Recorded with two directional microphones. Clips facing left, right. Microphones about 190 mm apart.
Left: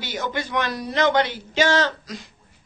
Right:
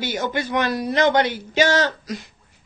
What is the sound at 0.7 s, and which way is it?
Speech, 55° right (ahead or behind).